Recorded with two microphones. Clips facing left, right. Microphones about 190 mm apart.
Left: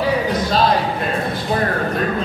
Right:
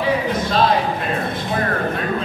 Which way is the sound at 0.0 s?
35° left (ahead or behind).